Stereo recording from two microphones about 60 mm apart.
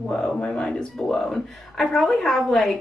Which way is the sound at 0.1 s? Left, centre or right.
Centre.